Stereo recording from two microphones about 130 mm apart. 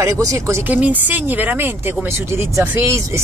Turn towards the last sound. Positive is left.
turn(degrees=-20)  # may be behind; listen again after turning